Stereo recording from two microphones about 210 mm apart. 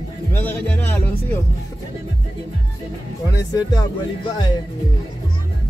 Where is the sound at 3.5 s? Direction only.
20° left (ahead or behind).